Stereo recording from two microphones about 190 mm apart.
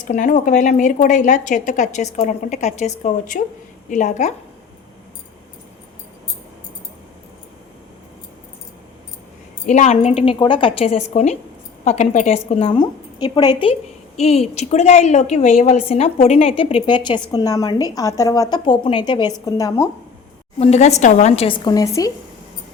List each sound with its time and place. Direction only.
0.0 s a woman's voice: 45° left (ahead or behind)
9.6 s a woman's voice: 40° left (ahead or behind); by 19.9 s 15° left (ahead or behind)
20.6 s a woman's voice: 35° left (ahead or behind); by 22.1 s 20° left (ahead or behind)